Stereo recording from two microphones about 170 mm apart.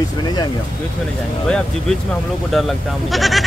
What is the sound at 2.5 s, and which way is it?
Speech, centre (ahead or behind).